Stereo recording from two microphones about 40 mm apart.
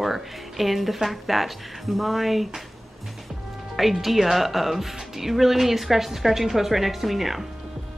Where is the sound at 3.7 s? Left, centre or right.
Centre.